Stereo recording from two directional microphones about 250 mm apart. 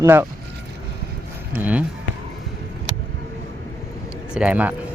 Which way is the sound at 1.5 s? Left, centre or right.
Centre.